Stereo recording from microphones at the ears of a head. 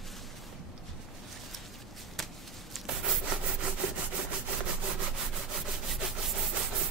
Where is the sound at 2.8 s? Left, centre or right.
Right.